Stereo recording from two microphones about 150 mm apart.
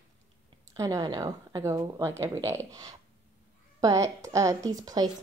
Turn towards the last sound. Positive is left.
turn(degrees=-25)  # may be behind; listen again after turning